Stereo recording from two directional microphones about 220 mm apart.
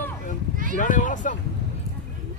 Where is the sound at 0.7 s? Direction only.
35° left (ahead or behind).